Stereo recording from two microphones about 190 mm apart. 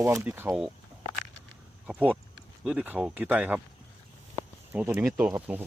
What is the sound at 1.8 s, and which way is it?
Speech, 10° right (ahead or behind).